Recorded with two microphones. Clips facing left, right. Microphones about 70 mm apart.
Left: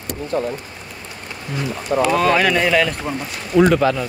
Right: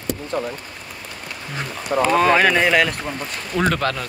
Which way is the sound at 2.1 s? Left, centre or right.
Right.